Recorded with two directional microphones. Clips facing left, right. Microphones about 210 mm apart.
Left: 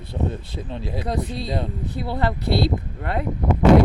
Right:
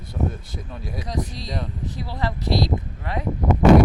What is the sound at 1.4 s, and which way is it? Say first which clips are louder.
Speech: left 4 dB; 30° left (ahead or behind).